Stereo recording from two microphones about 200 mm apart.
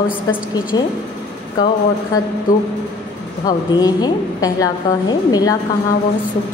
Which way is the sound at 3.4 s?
20° left (ahead or behind).